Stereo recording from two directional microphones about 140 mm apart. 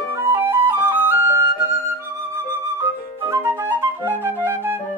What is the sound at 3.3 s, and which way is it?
Flute, 20° right (ahead or behind).